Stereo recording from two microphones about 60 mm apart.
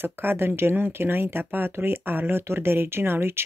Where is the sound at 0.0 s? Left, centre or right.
Right.